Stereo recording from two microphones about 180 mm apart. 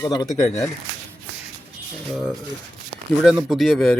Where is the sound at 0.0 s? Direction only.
20° left (ahead or behind).